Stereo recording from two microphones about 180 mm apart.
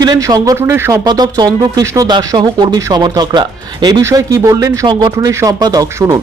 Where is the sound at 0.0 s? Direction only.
20° right (ahead or behind).